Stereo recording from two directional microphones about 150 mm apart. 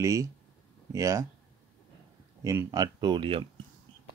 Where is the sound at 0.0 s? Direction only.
20° right (ahead or behind).